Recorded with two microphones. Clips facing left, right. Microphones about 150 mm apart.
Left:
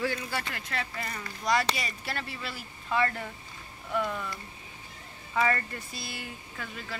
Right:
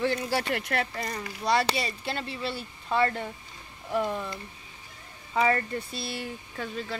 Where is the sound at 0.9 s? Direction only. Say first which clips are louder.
Right 4 dB; 35° right (ahead or behind).